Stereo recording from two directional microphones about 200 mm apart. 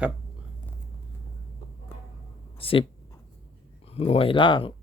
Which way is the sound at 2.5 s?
30° left (ahead or behind).